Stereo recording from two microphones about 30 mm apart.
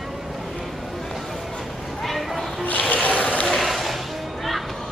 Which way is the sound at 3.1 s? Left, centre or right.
Left.